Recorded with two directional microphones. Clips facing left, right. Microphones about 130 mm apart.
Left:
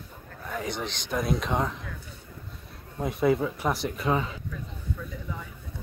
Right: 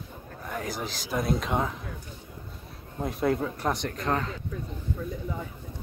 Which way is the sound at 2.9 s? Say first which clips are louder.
Left 2 dB; centre (ahead or behind).